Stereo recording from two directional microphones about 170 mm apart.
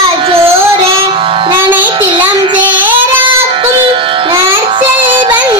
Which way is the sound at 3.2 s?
30° right (ahead or behind).